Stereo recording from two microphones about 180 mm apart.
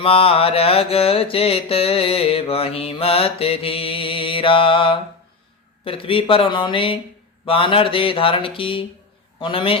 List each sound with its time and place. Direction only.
0.0 s mantra: 30° left (ahead or behind)
5.8 s speech: 30° left (ahead or behind)